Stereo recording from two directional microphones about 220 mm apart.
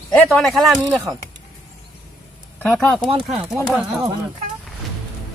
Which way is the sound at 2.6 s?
Centre (ahead or behind).